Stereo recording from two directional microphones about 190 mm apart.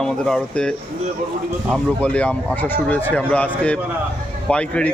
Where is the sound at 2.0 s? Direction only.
5° left (ahead or behind).